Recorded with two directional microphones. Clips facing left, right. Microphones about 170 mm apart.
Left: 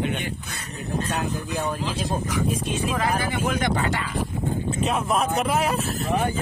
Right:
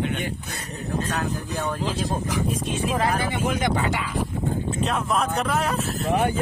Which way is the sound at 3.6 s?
10° right (ahead or behind).